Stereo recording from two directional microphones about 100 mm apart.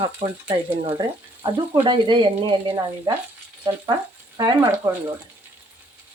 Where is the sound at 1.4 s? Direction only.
50° right (ahead or behind).